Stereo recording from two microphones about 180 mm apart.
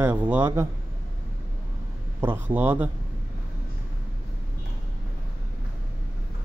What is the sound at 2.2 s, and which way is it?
Speech, 10° right (ahead or behind).